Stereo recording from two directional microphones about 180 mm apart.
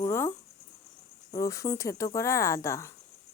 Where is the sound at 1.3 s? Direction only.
20° left (ahead or behind).